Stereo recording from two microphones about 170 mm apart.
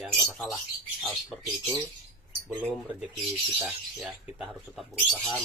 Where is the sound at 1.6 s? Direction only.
20° right (ahead or behind).